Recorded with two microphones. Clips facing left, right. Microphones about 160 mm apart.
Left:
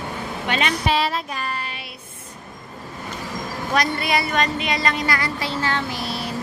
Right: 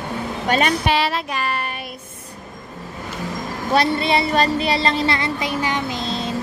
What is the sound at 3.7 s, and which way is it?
Speech, 25° right (ahead or behind).